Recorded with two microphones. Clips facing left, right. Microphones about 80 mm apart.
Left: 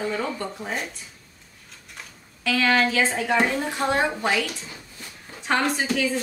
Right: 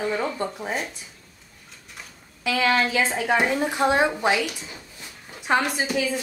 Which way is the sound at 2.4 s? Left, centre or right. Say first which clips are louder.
Left 1 dB; centre.